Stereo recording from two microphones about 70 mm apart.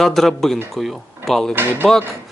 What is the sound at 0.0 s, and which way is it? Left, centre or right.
Speech, centre.